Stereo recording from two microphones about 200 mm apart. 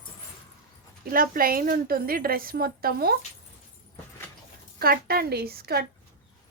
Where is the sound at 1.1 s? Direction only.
45° right (ahead or behind).